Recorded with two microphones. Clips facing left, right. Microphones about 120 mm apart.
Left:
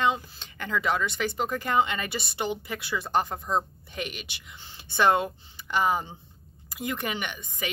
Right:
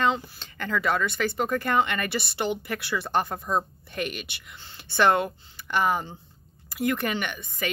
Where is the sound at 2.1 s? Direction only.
65° right (ahead or behind).